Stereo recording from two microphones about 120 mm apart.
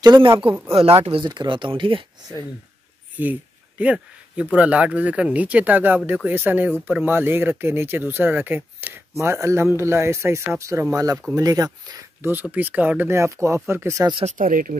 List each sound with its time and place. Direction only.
0.0 s speech: 40° right (ahead or behind)
3.2 s speech: 15° right (ahead or behind); by 12.1 s 35° right (ahead or behind)
12.2 s speech: 15° right (ahead or behind)
14.1 s speech: 80° right